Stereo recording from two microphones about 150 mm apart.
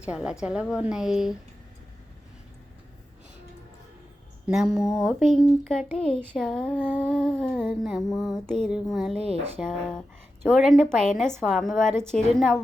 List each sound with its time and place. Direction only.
0.0 s speech: 5° right (ahead or behind)
4.4 s speech: centre (ahead or behind)
9.2 s speech: 40° right (ahead or behind)
9.6 s speech: 5° left (ahead or behind)